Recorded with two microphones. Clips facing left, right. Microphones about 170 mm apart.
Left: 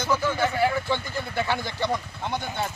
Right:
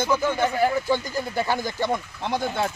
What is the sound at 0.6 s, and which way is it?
Speech, 40° right (ahead or behind).